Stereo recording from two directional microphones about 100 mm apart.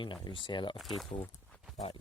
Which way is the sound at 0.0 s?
50° left (ahead or behind).